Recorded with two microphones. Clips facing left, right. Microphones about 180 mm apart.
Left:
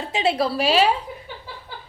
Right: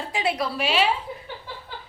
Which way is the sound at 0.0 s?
25° left (ahead or behind).